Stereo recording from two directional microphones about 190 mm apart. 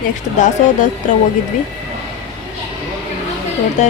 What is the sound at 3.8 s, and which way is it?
Speech, 40° left (ahead or behind).